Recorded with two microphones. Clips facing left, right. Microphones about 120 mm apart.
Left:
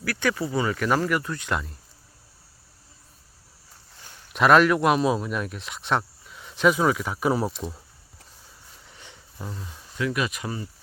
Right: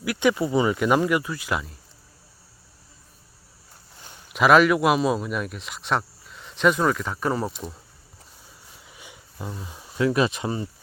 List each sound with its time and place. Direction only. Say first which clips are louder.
0.0 s speech: right 4 dB; 15° right (ahead or behind)
4.3 s a man's voice: right 1 dB; centre (ahead or behind)
8.8 s a sound: right 2 dB; 10° right (ahead or behind)
10.0 s speech: right 5 dB; 30° right (ahead or behind)